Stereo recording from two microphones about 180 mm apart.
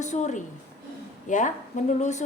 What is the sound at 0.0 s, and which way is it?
A woman's voice, 40° left (ahead or behind).